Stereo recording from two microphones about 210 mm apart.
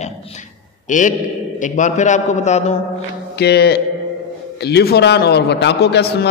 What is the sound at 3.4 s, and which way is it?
A man's voice, 50° left (ahead or behind).